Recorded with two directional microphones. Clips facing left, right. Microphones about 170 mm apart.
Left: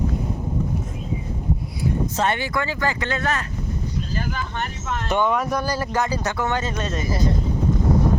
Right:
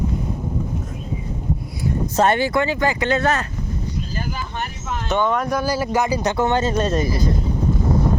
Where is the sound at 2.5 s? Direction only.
20° right (ahead or behind).